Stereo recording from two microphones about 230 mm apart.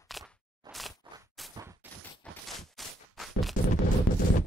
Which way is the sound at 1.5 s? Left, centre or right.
Centre.